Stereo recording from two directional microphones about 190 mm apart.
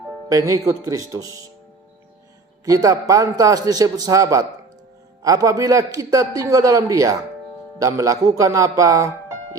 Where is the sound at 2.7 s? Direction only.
20° right (ahead or behind).